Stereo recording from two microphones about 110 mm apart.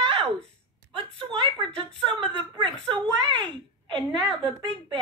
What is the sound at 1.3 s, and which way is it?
Speech, 50° right (ahead or behind).